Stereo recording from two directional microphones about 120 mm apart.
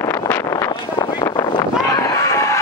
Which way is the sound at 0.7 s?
40° left (ahead or behind).